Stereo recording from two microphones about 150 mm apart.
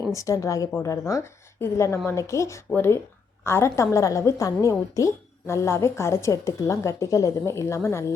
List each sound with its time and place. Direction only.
0.1 s a woman's voice: 20° left (ahead or behind)